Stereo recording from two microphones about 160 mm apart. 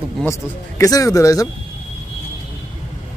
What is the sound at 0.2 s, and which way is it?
Speech, 20° left (ahead or behind).